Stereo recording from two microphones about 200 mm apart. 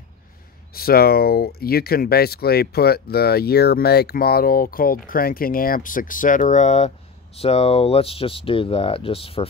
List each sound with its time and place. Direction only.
0.7 s speech: 50° left (ahead or behind); by 9.5 s 30° left (ahead or behind)